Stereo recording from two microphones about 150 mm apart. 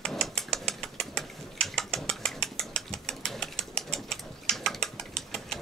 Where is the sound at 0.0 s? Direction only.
5° left (ahead or behind).